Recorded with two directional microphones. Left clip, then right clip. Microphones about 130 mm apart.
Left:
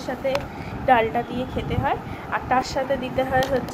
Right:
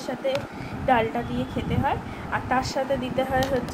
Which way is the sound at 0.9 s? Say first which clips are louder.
Left 4 dB; 10° left (ahead or behind).